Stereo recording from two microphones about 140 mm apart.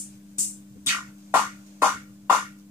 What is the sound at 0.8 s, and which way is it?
Music, 15° right (ahead or behind).